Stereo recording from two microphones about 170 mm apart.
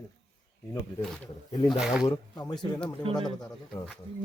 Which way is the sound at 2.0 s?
25° left (ahead or behind).